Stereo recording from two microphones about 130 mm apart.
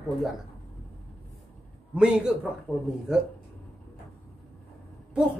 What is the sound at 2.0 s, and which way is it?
A woman's voice, 5° right (ahead or behind).